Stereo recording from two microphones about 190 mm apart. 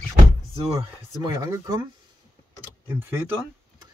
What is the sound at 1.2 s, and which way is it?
Speech, 20° right (ahead or behind).